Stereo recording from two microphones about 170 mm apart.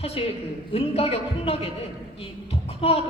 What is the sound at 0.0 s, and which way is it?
A man's voice, 35° left (ahead or behind).